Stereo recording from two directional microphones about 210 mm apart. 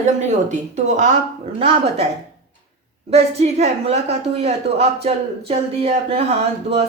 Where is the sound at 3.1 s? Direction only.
30° right (ahead or behind).